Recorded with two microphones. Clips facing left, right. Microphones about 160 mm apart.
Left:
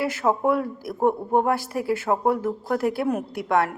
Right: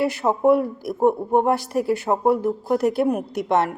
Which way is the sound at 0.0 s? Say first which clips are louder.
Right 3 dB; 15° right (ahead or behind).